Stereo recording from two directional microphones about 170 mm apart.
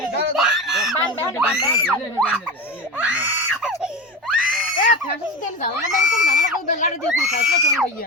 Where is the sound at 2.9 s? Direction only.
10° right (ahead or behind).